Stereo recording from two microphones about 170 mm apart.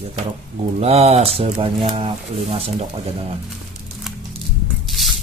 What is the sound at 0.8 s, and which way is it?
Speech, 35° right (ahead or behind).